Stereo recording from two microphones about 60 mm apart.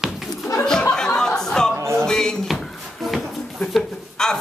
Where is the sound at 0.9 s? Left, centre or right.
Centre.